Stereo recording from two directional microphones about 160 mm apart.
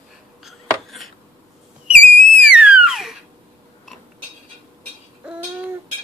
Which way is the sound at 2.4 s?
5° right (ahead or behind).